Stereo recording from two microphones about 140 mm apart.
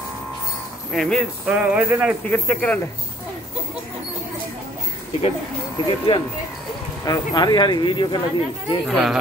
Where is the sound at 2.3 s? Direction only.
10° left (ahead or behind).